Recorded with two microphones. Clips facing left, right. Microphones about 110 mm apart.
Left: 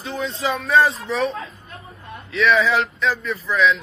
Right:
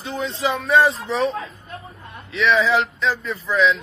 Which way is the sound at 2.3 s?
25° right (ahead or behind).